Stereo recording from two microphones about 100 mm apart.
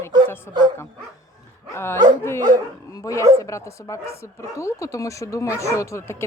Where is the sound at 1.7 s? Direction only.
25° left (ahead or behind).